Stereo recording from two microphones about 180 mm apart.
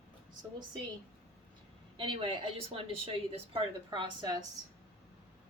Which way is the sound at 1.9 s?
30° right (ahead or behind).